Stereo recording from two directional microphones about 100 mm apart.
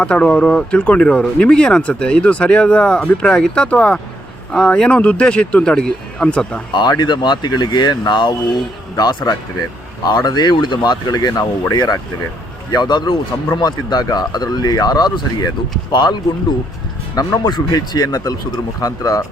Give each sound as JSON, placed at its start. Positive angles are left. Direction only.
{"t": 0.0, "sound": "speech", "side_deg": 10}
{"t": 6.7, "sound": "a man's voice", "side_deg": 45}
{"t": 17.4, "sound": "speech", "side_deg": 40}